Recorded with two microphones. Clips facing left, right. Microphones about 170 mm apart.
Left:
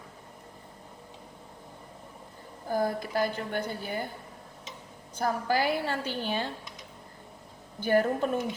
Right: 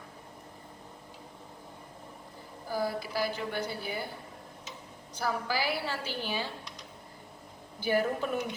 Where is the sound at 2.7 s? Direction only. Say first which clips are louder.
Left 4 dB; 50° left (ahead or behind).